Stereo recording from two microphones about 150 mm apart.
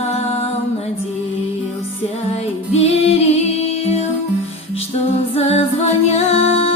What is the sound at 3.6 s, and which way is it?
Music, 45° left (ahead or behind).